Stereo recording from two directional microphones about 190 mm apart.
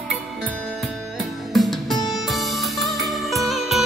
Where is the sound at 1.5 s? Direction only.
Centre (ahead or behind).